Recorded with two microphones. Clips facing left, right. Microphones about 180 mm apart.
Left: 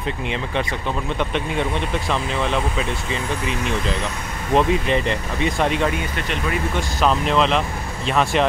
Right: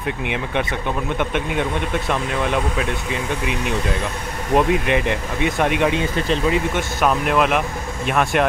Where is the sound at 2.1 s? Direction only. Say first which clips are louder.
Right 1 dB; 10° right (ahead or behind).